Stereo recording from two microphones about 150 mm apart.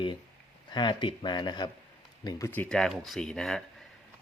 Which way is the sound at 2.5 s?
10° left (ahead or behind).